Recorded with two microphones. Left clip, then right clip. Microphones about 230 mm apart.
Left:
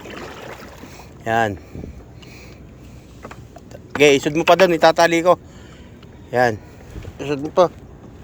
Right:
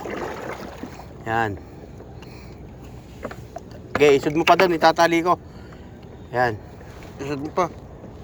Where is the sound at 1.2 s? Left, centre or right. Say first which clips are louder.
Left 4 dB; left.